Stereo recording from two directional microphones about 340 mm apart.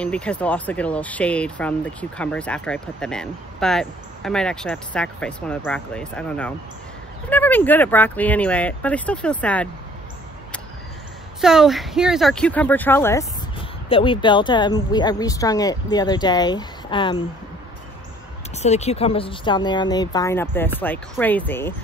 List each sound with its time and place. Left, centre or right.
0.0 s speech: centre
11.4 s speech: centre
18.6 s speech: centre